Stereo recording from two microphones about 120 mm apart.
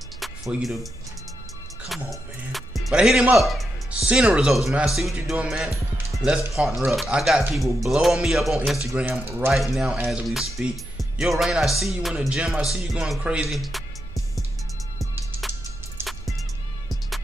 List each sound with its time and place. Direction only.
0.2 s music: centre (ahead or behind)
2.0 s speech: centre (ahead or behind)
8.9 s speech: 15° right (ahead or behind)
9.5 s speech: 5° right (ahead or behind)
16.0 s music: centre (ahead or behind)